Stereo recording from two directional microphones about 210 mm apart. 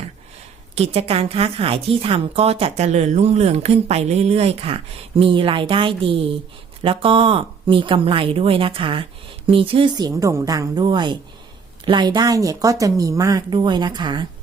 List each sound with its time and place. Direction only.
0.8 s a woman's voice: 30° right (ahead or behind)